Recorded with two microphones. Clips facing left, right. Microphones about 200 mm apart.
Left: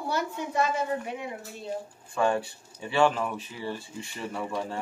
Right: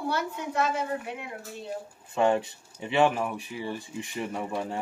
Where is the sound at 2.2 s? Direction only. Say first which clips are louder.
Right 2 dB; 20° right (ahead or behind).